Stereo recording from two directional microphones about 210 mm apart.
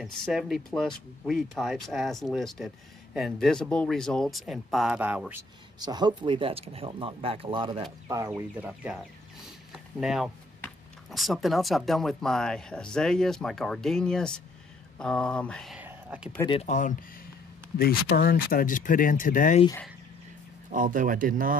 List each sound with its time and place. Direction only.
0.0 s speech: centre (ahead or behind)
5.8 s speech: 20° right (ahead or behind)
8.4 s speech: 5° right (ahead or behind)
16.3 s speech: 20° left (ahead or behind)
16.6 s speech: 35° left (ahead or behind)
20.7 s speech: 40° right (ahead or behind)